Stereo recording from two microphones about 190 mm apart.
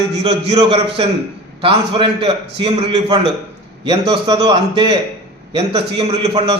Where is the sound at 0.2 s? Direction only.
30° right (ahead or behind).